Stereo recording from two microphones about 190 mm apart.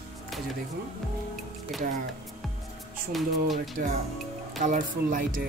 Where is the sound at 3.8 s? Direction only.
50° right (ahead or behind).